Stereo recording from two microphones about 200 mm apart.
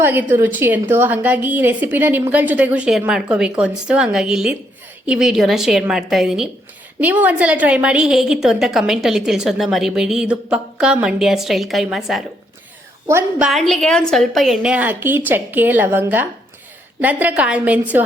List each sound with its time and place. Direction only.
0.0 s a woman's voice: 10° right (ahead or behind)
13.1 s a woman's voice: 10° right (ahead or behind)
13.5 s a woman's voice: centre (ahead or behind)